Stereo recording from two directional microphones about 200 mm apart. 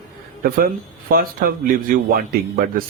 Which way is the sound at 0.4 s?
50° right (ahead or behind).